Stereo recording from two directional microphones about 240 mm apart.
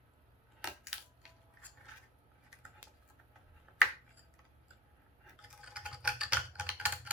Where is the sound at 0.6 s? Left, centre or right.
Centre.